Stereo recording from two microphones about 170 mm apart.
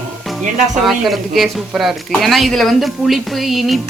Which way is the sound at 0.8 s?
Centre (ahead or behind).